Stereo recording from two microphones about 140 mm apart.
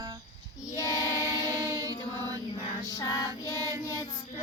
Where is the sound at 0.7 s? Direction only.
25° left (ahead or behind).